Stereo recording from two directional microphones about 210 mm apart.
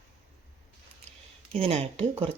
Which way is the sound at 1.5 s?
30° right (ahead or behind).